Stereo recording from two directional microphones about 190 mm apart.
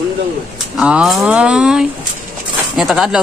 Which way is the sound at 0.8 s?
5° right (ahead or behind).